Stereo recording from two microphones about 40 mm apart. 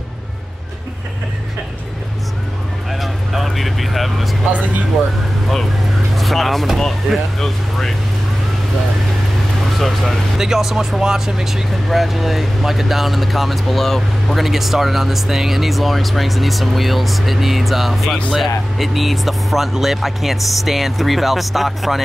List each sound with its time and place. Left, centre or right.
2.9 s vehicle: centre
4.5 s speech: right
6.1 s speech: centre
9.8 s speech: centre
10.3 s speech: centre